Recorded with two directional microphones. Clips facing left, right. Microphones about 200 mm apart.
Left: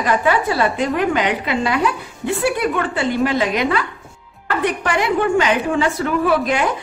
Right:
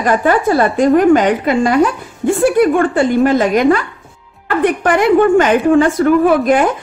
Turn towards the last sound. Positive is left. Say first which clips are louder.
# right 6 dB
turn(degrees=-50)  # may be behind; listen again after turning